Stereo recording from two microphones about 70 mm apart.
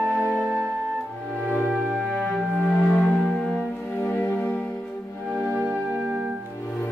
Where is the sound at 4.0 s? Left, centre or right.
Left.